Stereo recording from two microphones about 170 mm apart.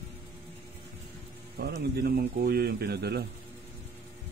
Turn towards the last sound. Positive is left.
turn(degrees=-70)  # may be behind; listen again after turning